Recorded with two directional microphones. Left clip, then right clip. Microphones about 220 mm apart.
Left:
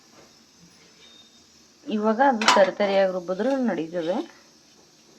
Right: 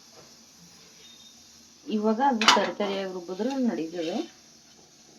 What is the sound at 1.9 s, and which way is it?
Speech, 15° left (ahead or behind).